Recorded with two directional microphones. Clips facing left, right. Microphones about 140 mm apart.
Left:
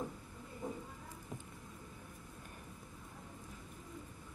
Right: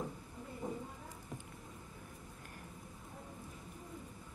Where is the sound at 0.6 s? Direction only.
20° right (ahead or behind).